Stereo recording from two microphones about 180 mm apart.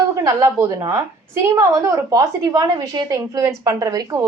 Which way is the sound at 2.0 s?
20° right (ahead or behind).